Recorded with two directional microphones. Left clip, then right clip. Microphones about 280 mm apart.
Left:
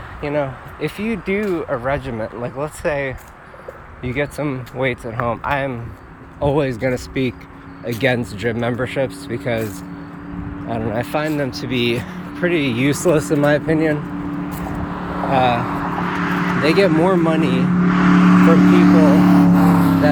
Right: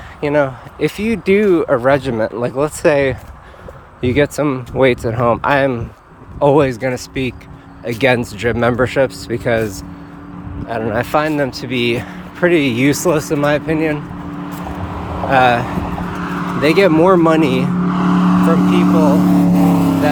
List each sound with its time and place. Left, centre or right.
0.2 s speech: centre
10.7 s speech: centre
14.6 s vehicle: right
15.3 s speech: centre
15.8 s vehicle: right
16.6 s speech: centre
17.8 s vehicle: right
19.0 s speech: right
19.3 s vehicle: right